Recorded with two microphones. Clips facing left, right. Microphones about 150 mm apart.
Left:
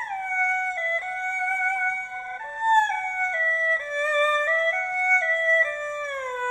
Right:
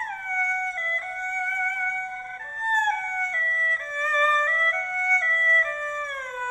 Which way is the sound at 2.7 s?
30° left (ahead or behind).